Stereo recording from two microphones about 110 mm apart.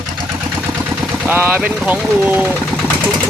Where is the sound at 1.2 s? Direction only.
15° right (ahead or behind).